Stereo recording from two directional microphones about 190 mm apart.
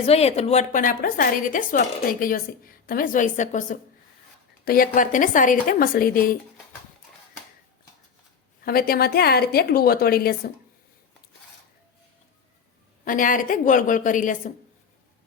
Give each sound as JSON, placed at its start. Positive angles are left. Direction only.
{"t": 0.0, "sound": "a woman's voice", "side_deg": 30}
{"t": 8.6, "sound": "a woman's voice", "side_deg": 50}
{"t": 13.1, "sound": "a woman's voice", "side_deg": 45}